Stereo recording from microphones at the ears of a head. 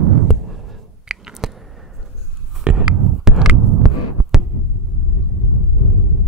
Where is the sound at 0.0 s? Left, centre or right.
Right.